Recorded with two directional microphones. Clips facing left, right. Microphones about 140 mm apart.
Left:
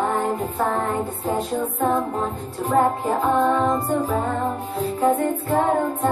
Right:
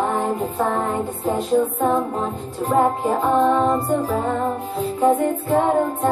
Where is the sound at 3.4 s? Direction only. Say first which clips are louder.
Right 2 dB; 20° right (ahead or behind).